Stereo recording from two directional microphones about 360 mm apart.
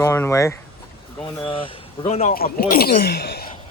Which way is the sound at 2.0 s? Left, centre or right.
Centre.